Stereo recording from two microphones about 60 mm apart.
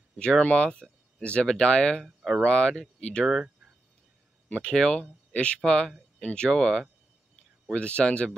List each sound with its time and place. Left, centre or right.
0.2 s speech: centre
2.0 s a sound: centre
2.4 s speech: centre
4.5 s speech: centre